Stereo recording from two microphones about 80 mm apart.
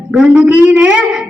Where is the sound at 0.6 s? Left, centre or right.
Right.